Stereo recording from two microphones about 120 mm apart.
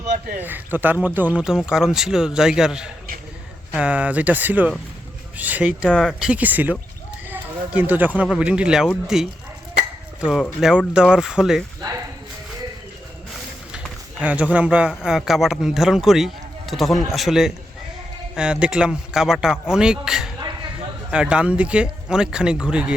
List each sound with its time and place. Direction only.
0.3 s speech: 15° right (ahead or behind)
5.9 s speech: 5° left (ahead or behind)
6.1 s speech: 10° right (ahead or behind)
11.8 s speech: 30° right (ahead or behind)
14.2 s speech: 10° right (ahead or behind)